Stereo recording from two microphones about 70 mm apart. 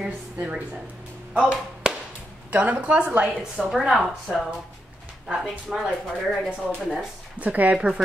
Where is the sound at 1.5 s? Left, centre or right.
Centre.